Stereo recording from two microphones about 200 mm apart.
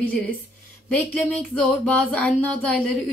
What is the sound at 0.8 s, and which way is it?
Speech, 5° left (ahead or behind).